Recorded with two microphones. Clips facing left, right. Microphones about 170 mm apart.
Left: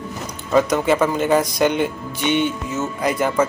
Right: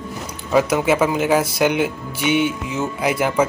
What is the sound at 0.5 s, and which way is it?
Speech, 5° right (ahead or behind).